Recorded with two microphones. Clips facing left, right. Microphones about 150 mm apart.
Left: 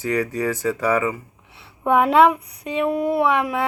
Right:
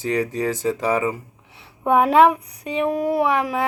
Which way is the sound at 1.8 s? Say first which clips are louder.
Even; 35° right (ahead or behind).